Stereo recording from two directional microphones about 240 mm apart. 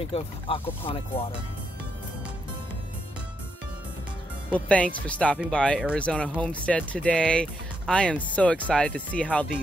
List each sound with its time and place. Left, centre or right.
0.0 s speech: left
4.6 s speech: centre